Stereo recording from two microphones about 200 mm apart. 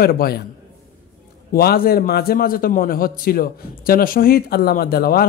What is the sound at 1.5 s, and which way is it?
A man's voice, 50° left (ahead or behind).